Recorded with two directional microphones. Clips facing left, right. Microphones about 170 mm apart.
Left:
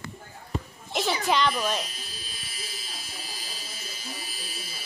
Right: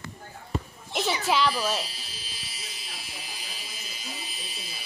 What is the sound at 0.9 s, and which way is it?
Speech, centre (ahead or behind).